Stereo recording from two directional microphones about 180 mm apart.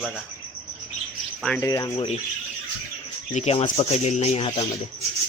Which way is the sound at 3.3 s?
35° left (ahead or behind).